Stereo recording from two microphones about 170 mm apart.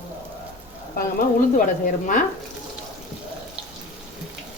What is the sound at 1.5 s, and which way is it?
Speech, 55° left (ahead or behind).